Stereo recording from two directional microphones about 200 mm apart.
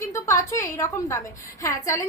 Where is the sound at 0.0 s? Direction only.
15° left (ahead or behind).